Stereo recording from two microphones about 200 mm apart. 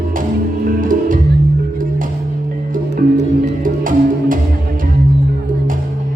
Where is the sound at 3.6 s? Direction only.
45° right (ahead or behind).